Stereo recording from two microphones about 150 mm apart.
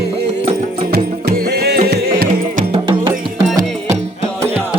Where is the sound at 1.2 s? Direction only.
90° right; by 2.6 s 65° right (ahead or behind).